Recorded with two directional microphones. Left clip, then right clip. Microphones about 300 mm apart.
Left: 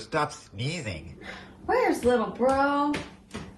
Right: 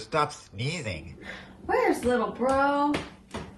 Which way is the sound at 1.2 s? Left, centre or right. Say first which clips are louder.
Left 3 dB; centre.